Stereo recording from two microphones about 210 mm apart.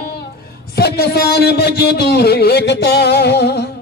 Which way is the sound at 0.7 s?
50° left (ahead or behind).